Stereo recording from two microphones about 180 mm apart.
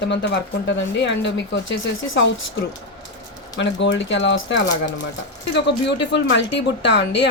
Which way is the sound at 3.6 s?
90° left.